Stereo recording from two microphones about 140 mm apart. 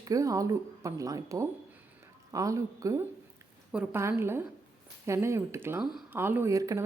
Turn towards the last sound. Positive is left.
turn(degrees=-25)  # may be behind; listen again after turning